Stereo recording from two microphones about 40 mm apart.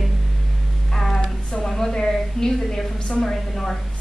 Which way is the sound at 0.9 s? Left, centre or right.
Centre.